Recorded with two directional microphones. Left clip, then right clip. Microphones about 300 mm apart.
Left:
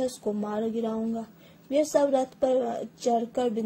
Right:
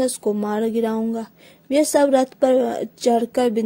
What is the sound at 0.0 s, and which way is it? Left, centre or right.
A woman's voice, right.